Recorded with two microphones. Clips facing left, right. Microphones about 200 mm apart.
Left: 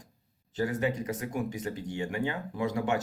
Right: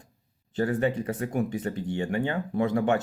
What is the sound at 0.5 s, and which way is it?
Speech, 55° right (ahead or behind).